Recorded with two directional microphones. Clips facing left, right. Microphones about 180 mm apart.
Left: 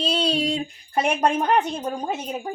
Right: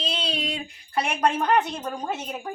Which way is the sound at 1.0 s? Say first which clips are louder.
Left 3 dB; 20° left (ahead or behind).